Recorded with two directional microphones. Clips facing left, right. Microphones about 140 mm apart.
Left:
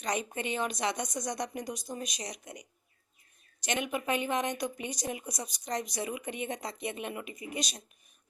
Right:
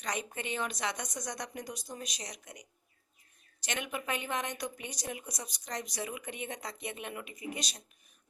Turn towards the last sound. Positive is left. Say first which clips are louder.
# left 3 dB
turn(degrees=15)  # may be behind; listen again after turning